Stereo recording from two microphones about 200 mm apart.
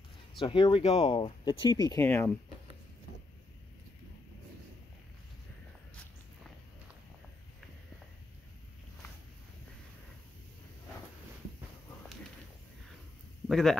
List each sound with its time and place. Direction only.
0.4 s speech: 25° left (ahead or behind)
13.5 s speech: centre (ahead or behind)